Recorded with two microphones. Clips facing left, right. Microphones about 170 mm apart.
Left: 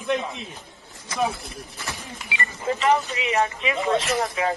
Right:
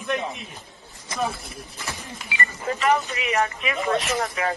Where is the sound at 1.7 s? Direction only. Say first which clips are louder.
Right 1 dB; 15° right (ahead or behind).